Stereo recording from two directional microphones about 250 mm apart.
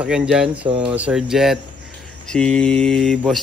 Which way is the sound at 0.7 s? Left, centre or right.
Right.